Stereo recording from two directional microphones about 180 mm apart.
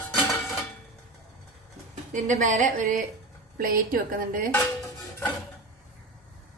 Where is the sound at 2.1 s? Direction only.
45° right (ahead or behind).